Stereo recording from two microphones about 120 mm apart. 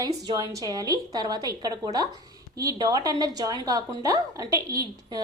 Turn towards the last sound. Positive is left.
turn(degrees=-30)  # may be behind; listen again after turning